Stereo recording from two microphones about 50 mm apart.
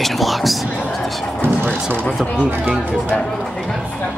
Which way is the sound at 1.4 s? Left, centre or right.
Right.